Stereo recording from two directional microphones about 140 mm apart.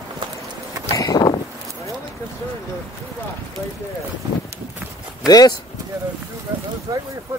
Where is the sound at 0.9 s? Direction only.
25° left (ahead or behind).